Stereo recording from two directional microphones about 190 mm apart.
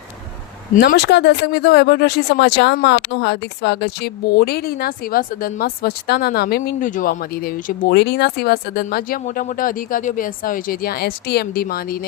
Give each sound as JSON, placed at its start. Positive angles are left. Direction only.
{"t": 0.8, "sound": "speech", "side_deg": 60}
{"t": 6.7, "sound": "speech", "side_deg": 45}